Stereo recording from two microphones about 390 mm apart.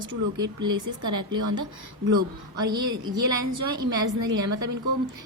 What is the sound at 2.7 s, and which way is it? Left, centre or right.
Speech, centre.